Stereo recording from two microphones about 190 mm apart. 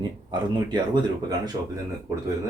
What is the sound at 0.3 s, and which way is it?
Speech, 25° right (ahead or behind).